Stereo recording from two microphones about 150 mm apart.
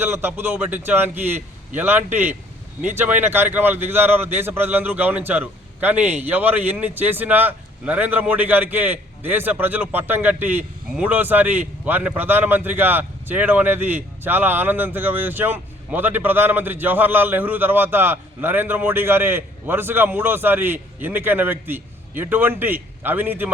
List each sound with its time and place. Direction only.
0.0 s speech: 15° right (ahead or behind)